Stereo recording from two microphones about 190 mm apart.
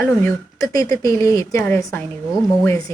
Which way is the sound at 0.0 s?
15° left (ahead or behind).